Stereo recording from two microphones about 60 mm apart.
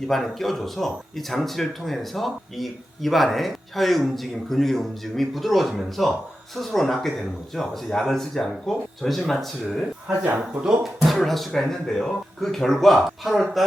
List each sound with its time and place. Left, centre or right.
0.1 s speech: centre
10.2 s speech: right
10.6 s speech: centre